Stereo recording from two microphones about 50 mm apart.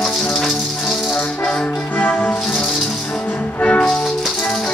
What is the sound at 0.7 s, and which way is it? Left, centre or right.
Music, centre.